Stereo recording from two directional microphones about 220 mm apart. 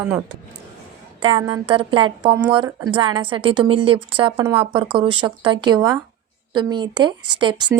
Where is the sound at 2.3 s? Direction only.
5° right (ahead or behind).